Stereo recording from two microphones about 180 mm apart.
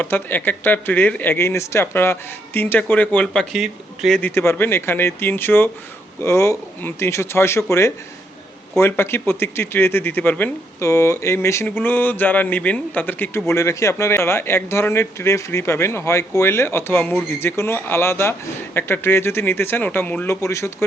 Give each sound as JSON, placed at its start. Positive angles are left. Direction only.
{"t": 0.0, "sound": "speech", "side_deg": 10}
{"t": 4.2, "sound": "speech", "side_deg": 15}